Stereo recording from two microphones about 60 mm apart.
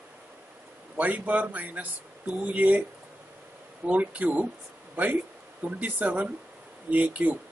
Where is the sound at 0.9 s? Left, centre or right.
Right.